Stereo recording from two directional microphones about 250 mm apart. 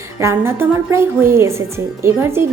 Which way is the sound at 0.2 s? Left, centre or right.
Centre.